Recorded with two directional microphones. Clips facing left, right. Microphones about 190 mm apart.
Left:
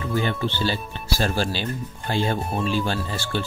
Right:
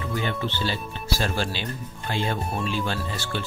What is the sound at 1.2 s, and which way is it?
Speech, 35° left (ahead or behind).